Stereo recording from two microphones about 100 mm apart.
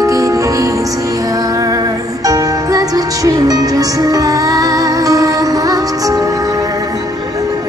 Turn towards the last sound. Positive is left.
turn(degrees=-35)  # may be behind; listen again after turning